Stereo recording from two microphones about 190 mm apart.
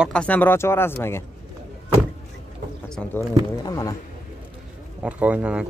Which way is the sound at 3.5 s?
20° left (ahead or behind).